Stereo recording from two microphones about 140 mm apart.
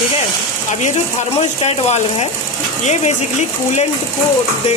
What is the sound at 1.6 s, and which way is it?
Speech, 50° left (ahead or behind).